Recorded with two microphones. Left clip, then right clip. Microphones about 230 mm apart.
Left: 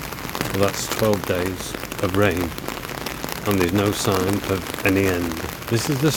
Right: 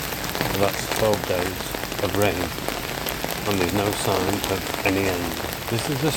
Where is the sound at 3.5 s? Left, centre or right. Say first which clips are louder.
Left 3 dB; left.